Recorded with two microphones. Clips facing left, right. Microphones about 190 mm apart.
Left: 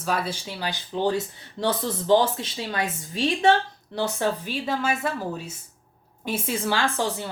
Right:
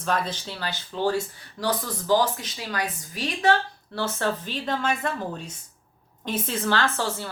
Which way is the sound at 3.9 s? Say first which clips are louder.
Left 2 dB; 15° left (ahead or behind).